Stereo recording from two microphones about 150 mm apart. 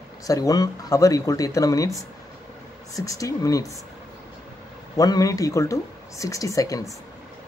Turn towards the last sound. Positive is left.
turn(degrees=20)  # may be behind; listen again after turning